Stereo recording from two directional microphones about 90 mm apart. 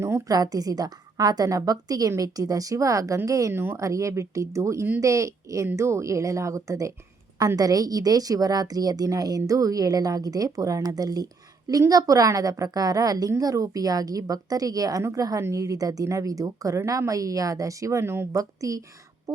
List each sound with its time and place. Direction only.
0.3 s a woman's voice: 45° right (ahead or behind)
3.5 s speech: 25° right (ahead or behind)
3.8 s a woman's voice: 35° right (ahead or behind)